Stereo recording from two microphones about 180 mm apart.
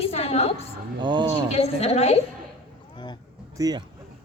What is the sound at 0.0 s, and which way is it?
Music, 35° left (ahead or behind).